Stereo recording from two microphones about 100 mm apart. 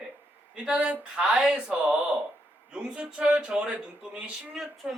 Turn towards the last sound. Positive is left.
turn(degrees=-5)  # may be behind; listen again after turning